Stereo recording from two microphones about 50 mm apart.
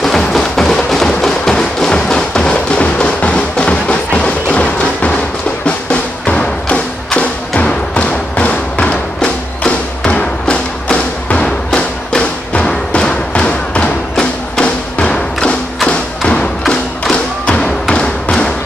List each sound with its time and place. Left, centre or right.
0.0 s music: centre; by 13.0 s left
13.0 s thump: left